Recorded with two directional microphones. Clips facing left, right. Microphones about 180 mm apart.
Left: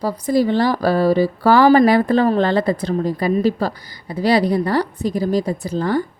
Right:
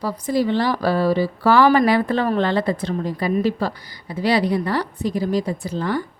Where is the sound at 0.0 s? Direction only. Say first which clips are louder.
Left 3 dB; 40° left (ahead or behind).